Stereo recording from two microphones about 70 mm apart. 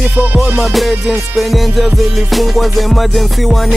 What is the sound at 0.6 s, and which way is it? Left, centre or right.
Music, centre.